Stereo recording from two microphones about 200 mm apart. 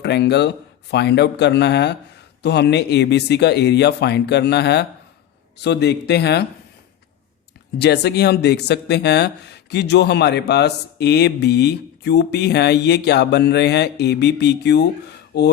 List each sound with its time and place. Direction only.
0.0 s speech: 55° left (ahead or behind)
7.8 s speech: 55° left (ahead or behind)